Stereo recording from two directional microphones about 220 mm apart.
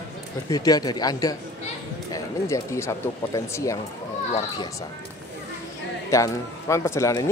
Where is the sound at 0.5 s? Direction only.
15° left (ahead or behind).